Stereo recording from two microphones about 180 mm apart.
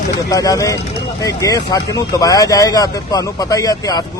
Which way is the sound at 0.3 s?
20° left (ahead or behind).